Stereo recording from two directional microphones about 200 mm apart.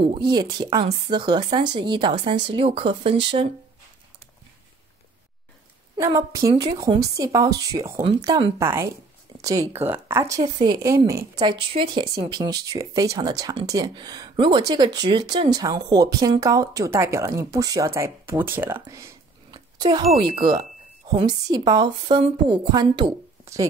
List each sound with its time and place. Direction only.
0.1 s a woman's voice: 20° right (ahead or behind)
5.9 s a woman's voice: 15° right (ahead or behind)
20.3 s speech: 40° right (ahead or behind)
21.1 s a woman's voice: 20° right (ahead or behind)